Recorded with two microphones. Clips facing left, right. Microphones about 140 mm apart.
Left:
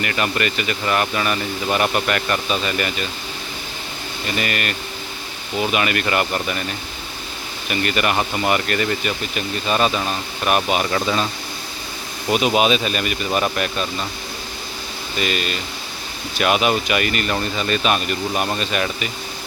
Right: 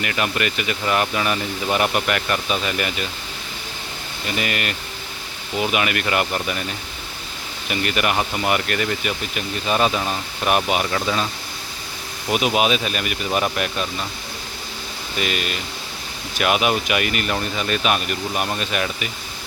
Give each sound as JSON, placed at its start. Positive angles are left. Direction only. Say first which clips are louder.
{"t": 0.0, "sound": "speech", "louder": "left 1 dB", "side_deg": -5}
{"t": 4.4, "sound": "speech", "louder": "left 1 dB", "side_deg": -15}
{"t": 7.7, "sound": "speech", "louder": "left 1 dB", "side_deg": -10}
{"t": 8.1, "sound": "speech", "louder": "left 1 dB", "side_deg": 0}
{"t": 10.8, "sound": "speech", "louder": "left 2 dB", "side_deg": 0}
{"t": 12.3, "sound": "speech", "louder": "left 2 dB", "side_deg": -5}
{"t": 15.2, "sound": "speech", "louder": "left 2 dB", "side_deg": -10}